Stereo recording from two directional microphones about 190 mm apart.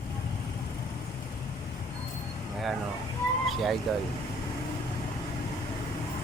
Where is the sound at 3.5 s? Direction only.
Centre (ahead or behind).